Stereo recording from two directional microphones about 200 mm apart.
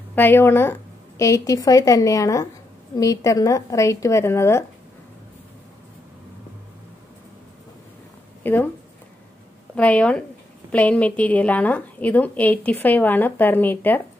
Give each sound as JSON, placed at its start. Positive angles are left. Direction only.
{"t": 0.1, "sound": "a woman's voice", "side_deg": 10}
{"t": 8.4, "sound": "a woman's voice", "side_deg": 10}
{"t": 9.8, "sound": "a woman's voice", "side_deg": 5}